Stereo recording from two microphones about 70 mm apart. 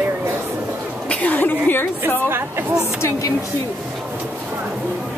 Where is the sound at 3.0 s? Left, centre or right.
Left.